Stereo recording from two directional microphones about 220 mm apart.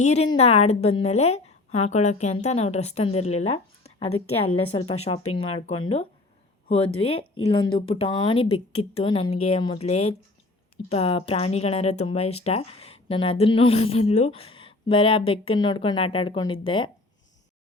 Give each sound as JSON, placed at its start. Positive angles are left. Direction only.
{"t": 0.0, "sound": "a woman's voice", "side_deg": 30}